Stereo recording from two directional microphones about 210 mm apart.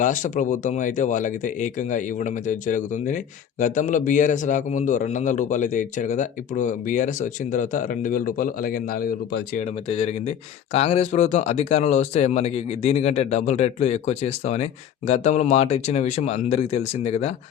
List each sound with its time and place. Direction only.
0.0 s speech: 35° left (ahead or behind)
9.9 s speech: 30° left (ahead or behind)